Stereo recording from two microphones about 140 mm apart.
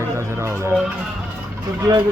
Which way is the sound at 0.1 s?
20° right (ahead or behind).